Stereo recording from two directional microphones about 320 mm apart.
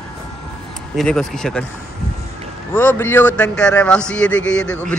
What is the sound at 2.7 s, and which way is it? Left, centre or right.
A woman's voice, centre.